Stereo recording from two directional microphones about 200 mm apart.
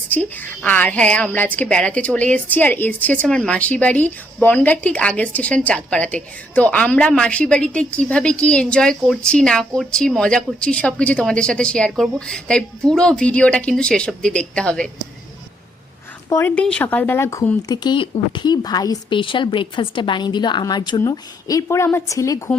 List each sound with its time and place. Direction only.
0.1 s a woman's voice: 10° left (ahead or behind)
16.3 s a woman's voice: 10° left (ahead or behind)
17.8 s a woman's voice: 25° left (ahead or behind)